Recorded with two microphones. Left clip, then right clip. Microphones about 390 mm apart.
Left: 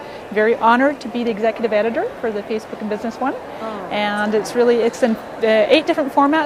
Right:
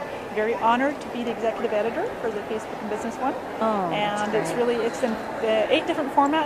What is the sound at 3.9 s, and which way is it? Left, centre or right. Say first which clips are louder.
Speech: left 5 dB; left.